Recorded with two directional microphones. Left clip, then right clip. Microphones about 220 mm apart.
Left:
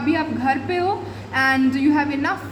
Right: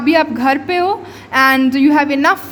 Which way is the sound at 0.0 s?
50° right (ahead or behind).